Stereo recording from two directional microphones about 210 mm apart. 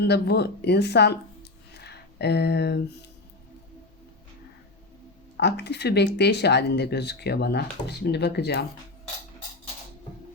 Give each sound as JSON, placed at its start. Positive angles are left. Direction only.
{"t": 0.0, "sound": "speech", "side_deg": 50}
{"t": 5.4, "sound": "speech", "side_deg": 50}